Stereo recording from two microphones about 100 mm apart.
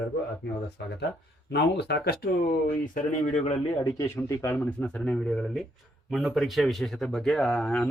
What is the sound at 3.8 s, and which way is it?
Speech, 35° left (ahead or behind).